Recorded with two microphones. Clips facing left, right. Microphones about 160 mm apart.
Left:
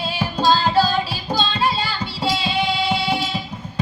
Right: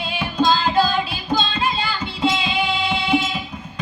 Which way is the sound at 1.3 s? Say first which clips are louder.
Left 1 dB; 35° left (ahead or behind).